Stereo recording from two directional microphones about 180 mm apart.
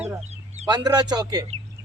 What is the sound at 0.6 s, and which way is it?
Speech, 20° right (ahead or behind).